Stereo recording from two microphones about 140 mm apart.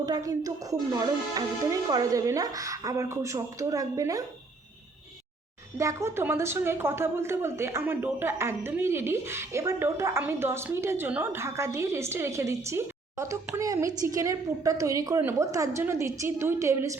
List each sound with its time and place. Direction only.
0.0 s a woman's voice: 25° right (ahead or behind)
5.7 s a woman's voice: 20° right (ahead or behind)